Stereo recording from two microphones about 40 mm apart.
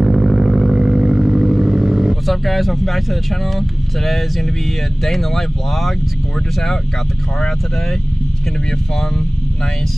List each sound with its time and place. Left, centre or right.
0.0 s vehicle: centre
2.2 s speech: centre